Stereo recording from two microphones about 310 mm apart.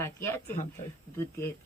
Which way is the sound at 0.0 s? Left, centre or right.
Centre.